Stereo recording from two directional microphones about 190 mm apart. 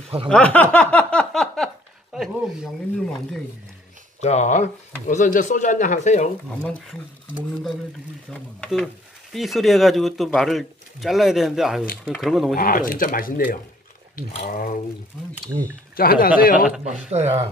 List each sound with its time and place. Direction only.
0.3 s speech: 5° left (ahead or behind)
4.2 s speech: 35° left (ahead or behind)
8.3 s speech: centre (ahead or behind)
12.5 s speech: 50° left (ahead or behind)
16.0 s speech: 50° left (ahead or behind)
16.8 s speech: 35° right (ahead or behind)